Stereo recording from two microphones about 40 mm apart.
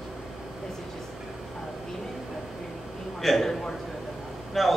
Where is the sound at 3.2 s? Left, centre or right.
Centre.